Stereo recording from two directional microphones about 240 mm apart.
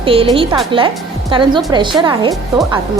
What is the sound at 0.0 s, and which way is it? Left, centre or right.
A woman's voice, right.